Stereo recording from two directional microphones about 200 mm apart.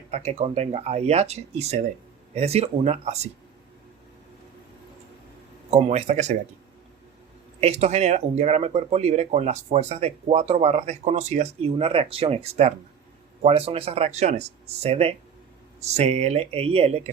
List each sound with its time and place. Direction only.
0.1 s speech: 35° right (ahead or behind)
5.7 s speech: 35° right (ahead or behind)
7.6 s speech: 35° right (ahead or behind)